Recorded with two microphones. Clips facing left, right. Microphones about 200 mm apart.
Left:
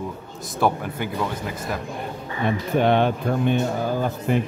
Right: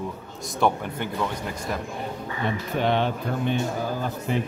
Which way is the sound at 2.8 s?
55° left (ahead or behind).